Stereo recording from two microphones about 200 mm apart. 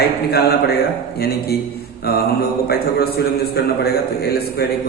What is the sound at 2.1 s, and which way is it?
Speech, 50° left (ahead or behind).